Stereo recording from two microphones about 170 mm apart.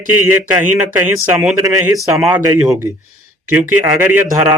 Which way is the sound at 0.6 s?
10° right (ahead or behind).